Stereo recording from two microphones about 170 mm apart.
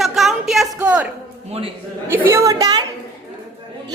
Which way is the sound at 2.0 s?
15° right (ahead or behind).